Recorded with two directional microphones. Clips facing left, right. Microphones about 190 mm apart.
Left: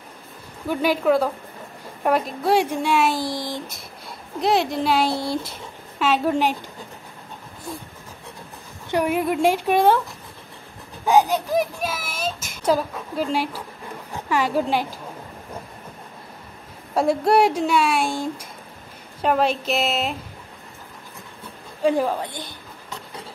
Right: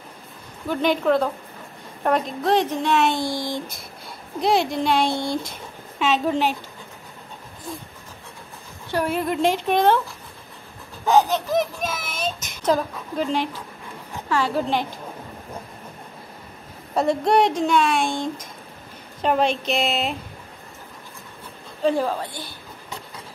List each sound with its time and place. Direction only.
0.7 s a child's voice: 5° left (ahead or behind)
8.9 s a child's voice: 15° left (ahead or behind)
11.1 s a child's voice: 15° left (ahead or behind)
16.9 s a child's voice: 5° left (ahead or behind)
21.8 s a child's voice: 15° left (ahead or behind)